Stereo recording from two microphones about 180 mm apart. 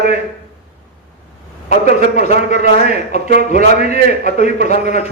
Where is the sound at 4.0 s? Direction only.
60° right (ahead or behind).